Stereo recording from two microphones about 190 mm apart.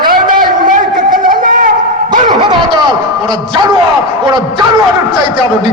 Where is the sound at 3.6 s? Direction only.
20° right (ahead or behind).